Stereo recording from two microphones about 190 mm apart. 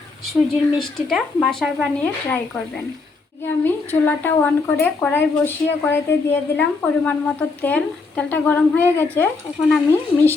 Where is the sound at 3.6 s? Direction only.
10° left (ahead or behind).